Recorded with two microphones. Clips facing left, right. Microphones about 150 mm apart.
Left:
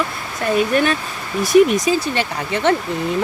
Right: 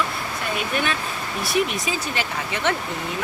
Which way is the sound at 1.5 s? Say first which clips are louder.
Left 11 dB; 40° left (ahead or behind).